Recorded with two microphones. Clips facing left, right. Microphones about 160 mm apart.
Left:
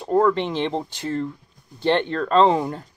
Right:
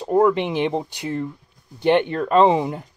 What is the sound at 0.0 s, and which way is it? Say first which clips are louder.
Speech: right 2 dB; 15° right (ahead or behind).